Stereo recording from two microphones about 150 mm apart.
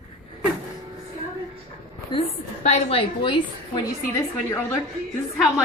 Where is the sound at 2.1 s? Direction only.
45° left (ahead or behind).